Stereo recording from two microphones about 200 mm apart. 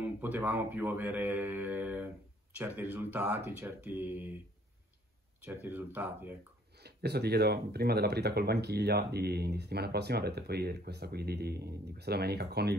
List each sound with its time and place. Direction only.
0.0 s speech: 10° right (ahead or behind)
5.4 s speech: 10° right (ahead or behind)
6.8 s speech: 55° right (ahead or behind)